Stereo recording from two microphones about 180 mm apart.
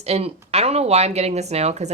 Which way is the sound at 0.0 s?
35° right (ahead or behind).